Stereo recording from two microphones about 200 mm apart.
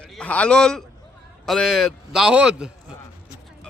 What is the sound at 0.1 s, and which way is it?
A man's voice, 5° left (ahead or behind).